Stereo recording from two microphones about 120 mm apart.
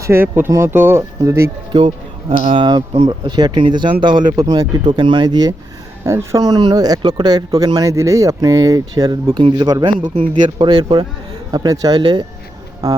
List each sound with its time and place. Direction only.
0.0 s speech: 20° right (ahead or behind)
2.6 s speech: 40° right (ahead or behind)